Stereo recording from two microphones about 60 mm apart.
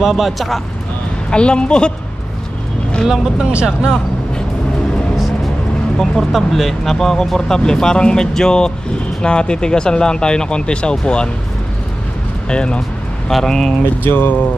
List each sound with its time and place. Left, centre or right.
0.0 s speech: centre
1.3 s speech: centre
3.1 s speech: centre
5.9 s speech: centre
12.4 s speech: centre
13.3 s speech: centre
14.0 s speech: left